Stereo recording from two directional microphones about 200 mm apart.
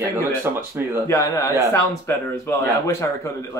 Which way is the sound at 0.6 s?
10° right (ahead or behind).